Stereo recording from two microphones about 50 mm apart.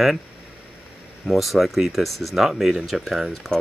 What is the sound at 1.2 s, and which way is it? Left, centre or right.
Speech, centre.